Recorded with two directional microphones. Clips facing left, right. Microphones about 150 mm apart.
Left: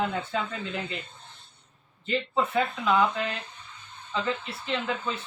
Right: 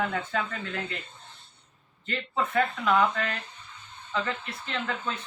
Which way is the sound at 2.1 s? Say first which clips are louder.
Left 3 dB; 10° left (ahead or behind).